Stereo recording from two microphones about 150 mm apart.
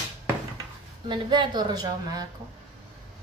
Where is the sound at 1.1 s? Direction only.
30° right (ahead or behind).